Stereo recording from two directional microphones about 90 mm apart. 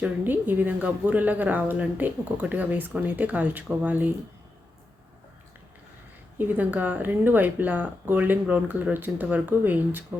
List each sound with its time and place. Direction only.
0.0 s a woman's voice: 20° right (ahead or behind)
6.4 s a woman's voice: 20° right (ahead or behind)